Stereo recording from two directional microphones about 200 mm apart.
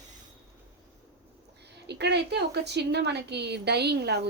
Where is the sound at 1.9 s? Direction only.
60° right (ahead or behind).